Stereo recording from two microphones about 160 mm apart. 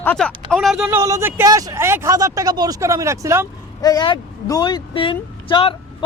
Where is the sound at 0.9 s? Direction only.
15° right (ahead or behind).